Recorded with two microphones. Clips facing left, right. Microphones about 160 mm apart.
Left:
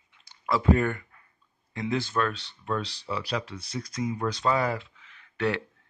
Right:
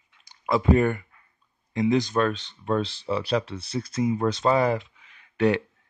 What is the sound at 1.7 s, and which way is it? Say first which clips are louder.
Speech: right 7 dB; 20° right (ahead or behind).